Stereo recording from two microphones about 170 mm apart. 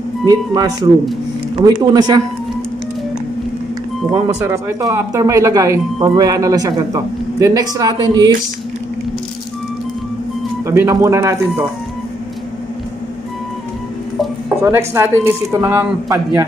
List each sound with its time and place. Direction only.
0.3 s a man's voice: 20° right (ahead or behind)
4.1 s a man's voice: 15° right (ahead or behind)
10.6 s speech: 15° right (ahead or behind)
14.6 s speech: 15° right (ahead or behind)